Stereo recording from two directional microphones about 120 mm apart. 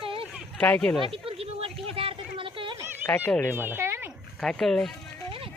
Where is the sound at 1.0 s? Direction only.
50° right (ahead or behind).